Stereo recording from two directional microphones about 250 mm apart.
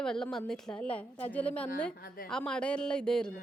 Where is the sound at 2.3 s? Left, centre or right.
Centre.